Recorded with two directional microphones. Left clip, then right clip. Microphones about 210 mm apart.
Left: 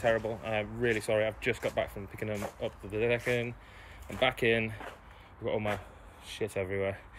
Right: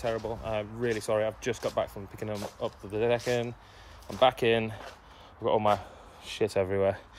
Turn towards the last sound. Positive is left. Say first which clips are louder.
# right 6 dB
turn(degrees=-25)  # may be behind; listen again after turning